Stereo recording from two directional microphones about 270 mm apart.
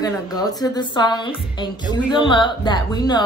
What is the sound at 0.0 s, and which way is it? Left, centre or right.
A woman's voice, centre.